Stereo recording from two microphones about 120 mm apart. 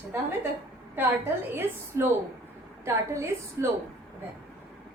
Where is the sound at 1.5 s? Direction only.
20° right (ahead or behind).